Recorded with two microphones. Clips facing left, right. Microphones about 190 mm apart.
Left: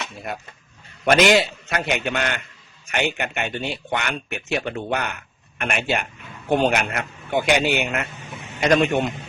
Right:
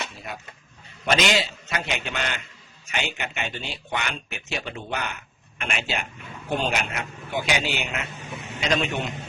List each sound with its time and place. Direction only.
1.1 s speech: 55° left (ahead or behind)